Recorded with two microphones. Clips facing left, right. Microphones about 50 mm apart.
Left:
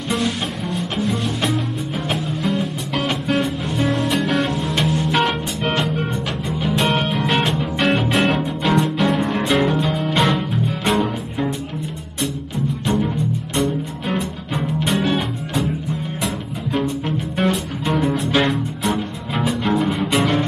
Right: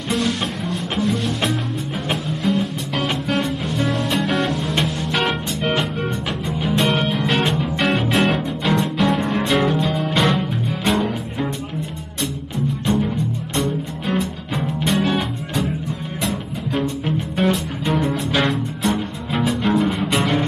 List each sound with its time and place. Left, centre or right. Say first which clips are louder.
0.1 s music: right 1 dB; centre
12.8 s music: even; centre